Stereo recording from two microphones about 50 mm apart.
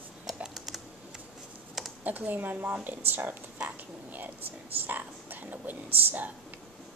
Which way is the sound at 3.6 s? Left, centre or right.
Right.